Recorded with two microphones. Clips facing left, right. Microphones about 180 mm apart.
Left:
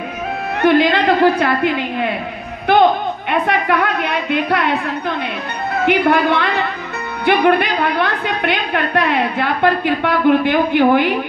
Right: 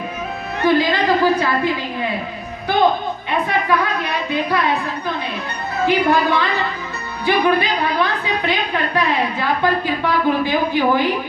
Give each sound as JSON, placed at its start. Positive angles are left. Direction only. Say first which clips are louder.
{"t": 0.6, "sound": "a woman's voice", "louder": "left 3 dB", "side_deg": 65}
{"t": 3.3, "sound": "a woman's voice", "louder": "left 2 dB", "side_deg": 65}
{"t": 5.9, "sound": "a woman's voice", "louder": "left 2 dB", "side_deg": 60}